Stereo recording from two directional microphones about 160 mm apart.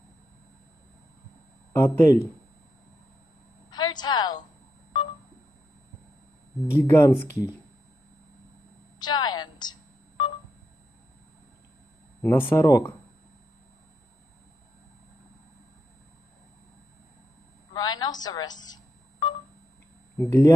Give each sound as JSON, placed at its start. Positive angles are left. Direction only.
{"t": 1.7, "sound": "speech", "side_deg": 15}
{"t": 3.7, "sound": "a sound", "side_deg": 25}
{"t": 6.8, "sound": "speech", "side_deg": 15}
{"t": 9.0, "sound": "telephone dialing", "side_deg": 25}
{"t": 12.2, "sound": "speech", "side_deg": 15}
{"t": 17.7, "sound": "telephone dialing", "side_deg": 25}
{"t": 20.2, "sound": "speech", "side_deg": 15}